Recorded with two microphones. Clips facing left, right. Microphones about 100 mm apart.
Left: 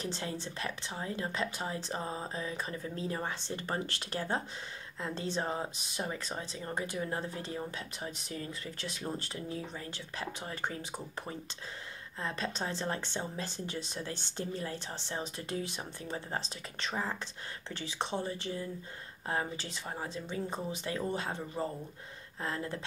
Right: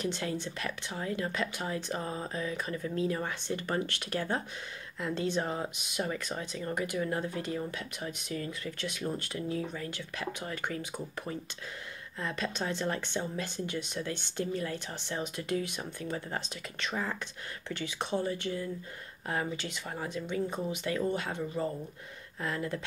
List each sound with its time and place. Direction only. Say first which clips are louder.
0.0 s speech: right 4 dB; 30° left (ahead or behind)